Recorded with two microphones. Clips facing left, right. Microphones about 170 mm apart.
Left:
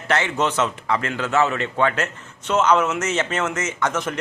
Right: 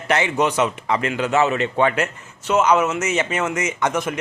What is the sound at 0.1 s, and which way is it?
A man's voice, 15° right (ahead or behind).